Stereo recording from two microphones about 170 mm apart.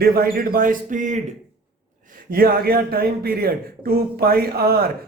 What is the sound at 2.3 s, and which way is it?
Speech, 60° right (ahead or behind).